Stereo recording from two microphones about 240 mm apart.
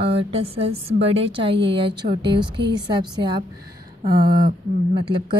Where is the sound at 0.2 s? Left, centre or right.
Right.